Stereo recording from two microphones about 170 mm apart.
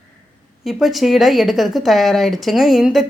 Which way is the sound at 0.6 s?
Centre (ahead or behind).